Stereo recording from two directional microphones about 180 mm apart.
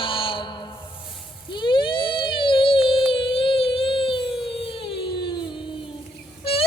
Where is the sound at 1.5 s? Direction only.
25° left (ahead or behind).